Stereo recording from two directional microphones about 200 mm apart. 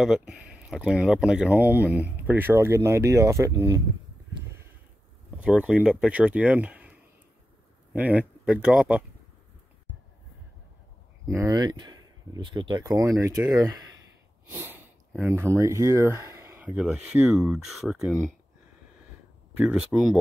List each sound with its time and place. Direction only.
0.0 s speech: centre (ahead or behind)
5.4 s speech: 5° right (ahead or behind)
11.2 s speech: 15° right (ahead or behind)
14.4 s speech: 10° right (ahead or behind)
19.6 s speech: 5° right (ahead or behind)